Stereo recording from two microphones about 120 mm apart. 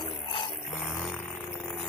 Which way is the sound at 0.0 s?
50° left (ahead or behind).